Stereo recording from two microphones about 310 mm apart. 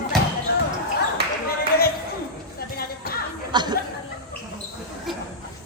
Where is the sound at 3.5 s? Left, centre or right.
Centre.